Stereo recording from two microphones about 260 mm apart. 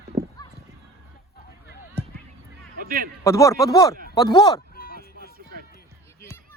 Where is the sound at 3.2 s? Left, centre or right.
Centre.